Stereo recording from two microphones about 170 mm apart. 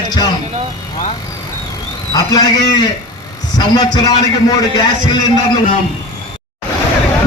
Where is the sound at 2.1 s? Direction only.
25° left (ahead or behind).